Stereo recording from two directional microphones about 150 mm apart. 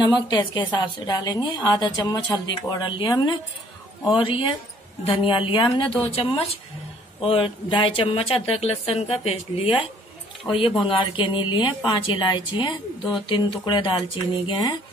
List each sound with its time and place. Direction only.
0.0 s a woman's voice: 30° left (ahead or behind)